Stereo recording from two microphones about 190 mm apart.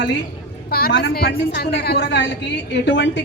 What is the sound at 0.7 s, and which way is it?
A woman's voice, 50° left (ahead or behind).